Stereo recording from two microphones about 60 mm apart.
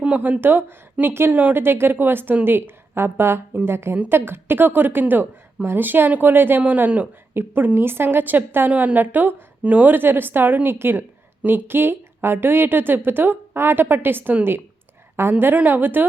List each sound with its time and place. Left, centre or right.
0.2 s a woman's voice: right
1.3 s a woman's voice: right